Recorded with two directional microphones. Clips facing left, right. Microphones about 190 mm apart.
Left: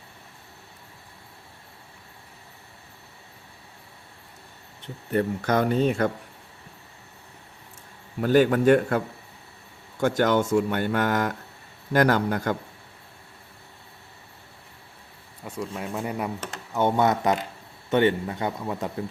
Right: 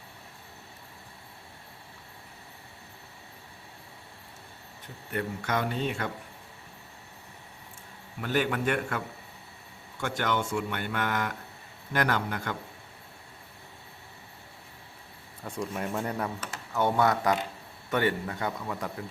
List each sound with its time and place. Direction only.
4.8 s speech: 35° left (ahead or behind)
8.2 s speech: 40° left (ahead or behind)
10.0 s speech: 40° left (ahead or behind)
15.4 s speech: 5° left (ahead or behind)
16.4 s a man's voice: 20° left (ahead or behind)